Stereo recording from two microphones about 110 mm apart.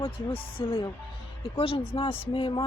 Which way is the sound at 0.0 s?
50° left (ahead or behind).